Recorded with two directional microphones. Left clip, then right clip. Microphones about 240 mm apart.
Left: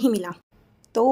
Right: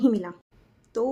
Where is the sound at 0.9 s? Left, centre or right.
Left.